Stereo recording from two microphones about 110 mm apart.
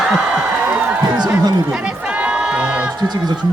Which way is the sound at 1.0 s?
40° right (ahead or behind).